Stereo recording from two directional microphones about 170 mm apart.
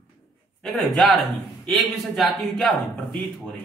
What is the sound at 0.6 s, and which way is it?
A woman's voice, centre (ahead or behind).